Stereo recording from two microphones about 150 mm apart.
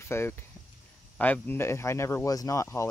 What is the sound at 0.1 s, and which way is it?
Speech, 15° left (ahead or behind).